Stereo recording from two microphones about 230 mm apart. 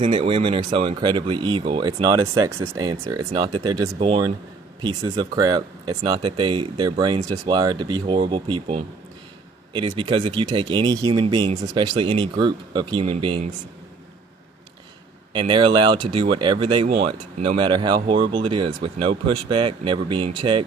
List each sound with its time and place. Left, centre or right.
0.0 s speech: right
15.3 s speech: right